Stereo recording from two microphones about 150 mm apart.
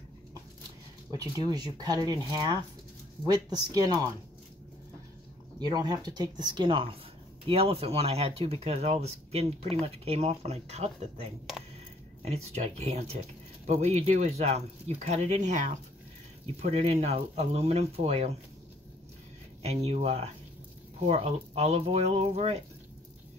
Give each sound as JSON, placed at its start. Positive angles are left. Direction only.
{"t": 1.1, "sound": "speech", "side_deg": -25}
{"t": 5.6, "sound": "speech", "side_deg": -25}
{"t": 12.3, "sound": "speech", "side_deg": -45}
{"t": 19.6, "sound": "speech", "side_deg": -45}